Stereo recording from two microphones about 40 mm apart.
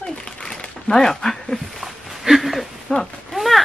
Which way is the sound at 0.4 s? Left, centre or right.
Centre.